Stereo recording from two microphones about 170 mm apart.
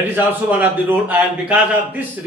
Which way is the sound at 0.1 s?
10° right (ahead or behind).